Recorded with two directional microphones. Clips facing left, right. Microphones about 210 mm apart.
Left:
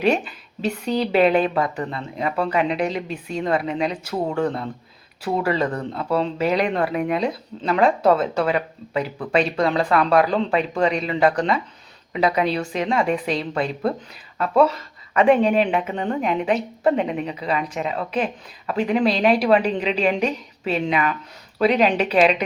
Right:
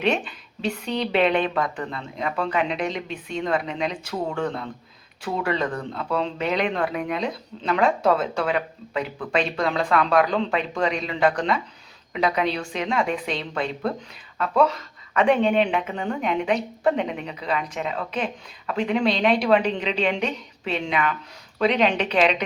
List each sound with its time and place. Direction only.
0.0 s a woman's voice: 5° left (ahead or behind)
5.7 s speech: 30° left (ahead or behind)
6.1 s a woman's voice: 5° left (ahead or behind)